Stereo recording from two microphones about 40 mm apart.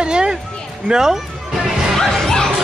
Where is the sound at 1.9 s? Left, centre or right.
Centre.